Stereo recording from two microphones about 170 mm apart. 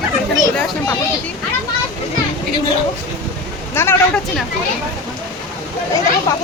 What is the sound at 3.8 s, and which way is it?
Speech, 15° left (ahead or behind).